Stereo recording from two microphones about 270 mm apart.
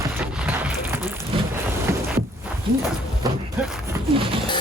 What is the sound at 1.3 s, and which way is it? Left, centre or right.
Boat, centre.